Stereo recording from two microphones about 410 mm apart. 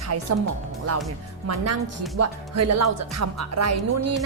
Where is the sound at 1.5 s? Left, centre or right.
Right.